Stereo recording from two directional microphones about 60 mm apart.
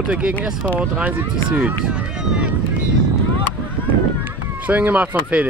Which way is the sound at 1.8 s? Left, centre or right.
Centre.